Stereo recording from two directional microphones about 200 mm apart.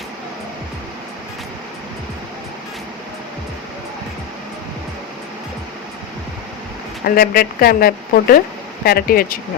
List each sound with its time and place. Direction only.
7.0 s a woman's voice: 50° left (ahead or behind)